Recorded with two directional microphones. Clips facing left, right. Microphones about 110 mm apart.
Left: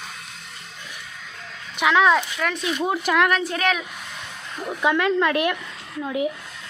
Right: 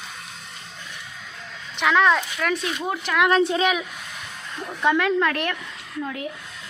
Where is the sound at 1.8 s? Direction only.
5° left (ahead or behind).